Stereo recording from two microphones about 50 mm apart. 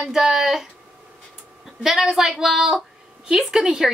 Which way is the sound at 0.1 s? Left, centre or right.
Centre.